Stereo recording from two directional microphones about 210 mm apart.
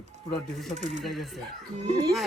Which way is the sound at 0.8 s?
35° right (ahead or behind).